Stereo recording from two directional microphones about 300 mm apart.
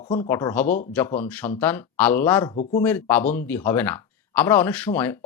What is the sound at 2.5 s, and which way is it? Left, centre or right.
Speech, left.